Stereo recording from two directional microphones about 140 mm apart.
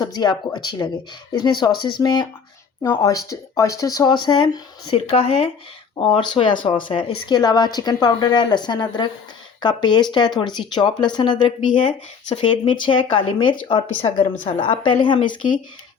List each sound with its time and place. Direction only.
0.0 s speech: 30° left (ahead or behind)
5.1 s speech: 45° left (ahead or behind)
6.0 s speech: 35° left (ahead or behind)